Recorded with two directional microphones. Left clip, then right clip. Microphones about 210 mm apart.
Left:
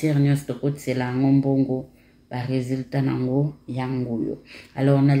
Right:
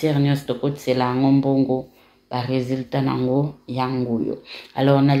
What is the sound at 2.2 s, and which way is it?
Speech, 35° right (ahead or behind).